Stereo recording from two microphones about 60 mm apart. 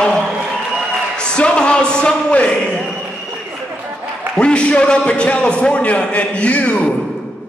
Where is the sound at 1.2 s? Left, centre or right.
Centre.